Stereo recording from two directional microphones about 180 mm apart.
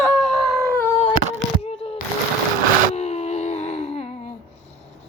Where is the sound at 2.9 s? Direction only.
35° left (ahead or behind).